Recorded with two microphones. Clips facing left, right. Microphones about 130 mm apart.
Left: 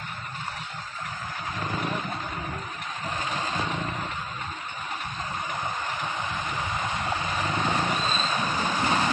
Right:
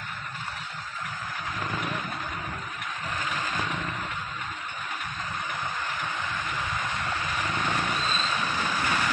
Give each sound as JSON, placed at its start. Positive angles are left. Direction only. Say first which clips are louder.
{"t": 3.2, "sound": "vehicle", "louder": "left 2 dB", "side_deg": 25}
{"t": 6.2, "sound": "vehicle", "louder": "left 1 dB", "side_deg": 20}